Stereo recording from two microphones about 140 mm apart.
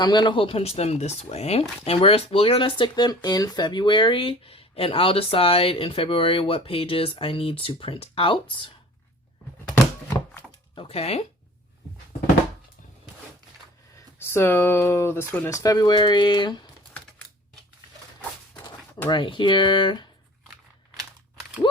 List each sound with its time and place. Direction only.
0.0 s speech: 30° left (ahead or behind)
10.8 s speech: 45° left (ahead or behind)
14.2 s speech: 15° left (ahead or behind); by 16.6 s 35° left (ahead or behind)
19.0 s speech: 35° left (ahead or behind)